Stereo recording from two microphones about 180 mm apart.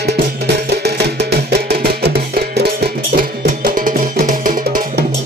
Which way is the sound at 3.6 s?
50° right (ahead or behind).